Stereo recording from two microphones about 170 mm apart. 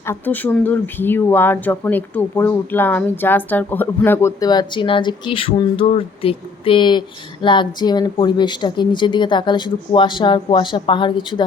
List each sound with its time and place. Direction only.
0.0 s speech: 15° left (ahead or behind)